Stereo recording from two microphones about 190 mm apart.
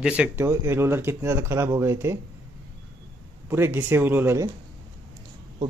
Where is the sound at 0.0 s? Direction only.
5° right (ahead or behind).